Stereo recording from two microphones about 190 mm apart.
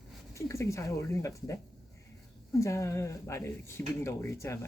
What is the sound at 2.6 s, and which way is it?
Speech, 15° left (ahead or behind).